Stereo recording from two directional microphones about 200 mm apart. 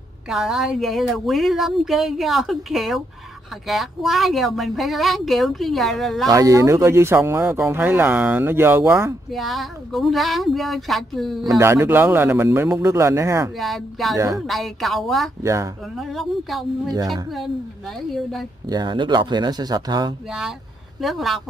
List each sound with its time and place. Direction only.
0.3 s speech: centre (ahead or behind)
6.2 s speech: 15° right (ahead or behind)
9.3 s speech: centre (ahead or behind)
11.4 s speech: 15° right (ahead or behind)
13.6 s speech: centre (ahead or behind)
14.1 s speech: 15° right (ahead or behind)
14.4 s speech: centre (ahead or behind)
15.4 s speech: 15° right (ahead or behind)
16.0 s speech: centre (ahead or behind)
18.7 s speech: 20° right (ahead or behind)
20.2 s speech: 5° right (ahead or behind)